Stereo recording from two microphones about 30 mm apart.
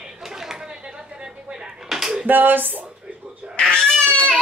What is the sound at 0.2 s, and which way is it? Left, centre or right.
Chatter, centre.